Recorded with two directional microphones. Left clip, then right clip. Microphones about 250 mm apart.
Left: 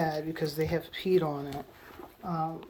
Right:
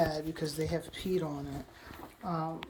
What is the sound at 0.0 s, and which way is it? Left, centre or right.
A woman's voice, centre.